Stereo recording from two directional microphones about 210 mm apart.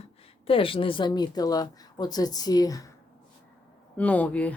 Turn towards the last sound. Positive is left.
turn(degrees=5)  # may be behind; listen again after turning